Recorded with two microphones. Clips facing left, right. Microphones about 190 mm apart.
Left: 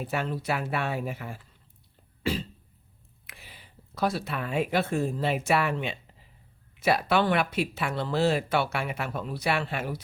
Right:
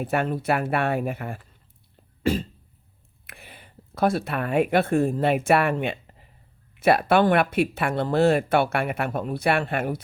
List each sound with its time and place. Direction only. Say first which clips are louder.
0.0 s speech: right 6 dB; 55° right (ahead or behind)
2.2 s cough: right 6 dB; 45° right (ahead or behind)
3.2 s speech: right 5 dB; 55° right (ahead or behind)